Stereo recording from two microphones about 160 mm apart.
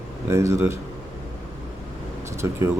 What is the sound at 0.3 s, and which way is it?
Speech, 20° right (ahead or behind).